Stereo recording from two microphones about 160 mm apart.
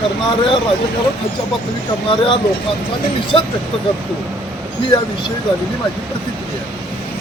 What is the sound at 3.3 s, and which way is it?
Speech, 30° left (ahead or behind).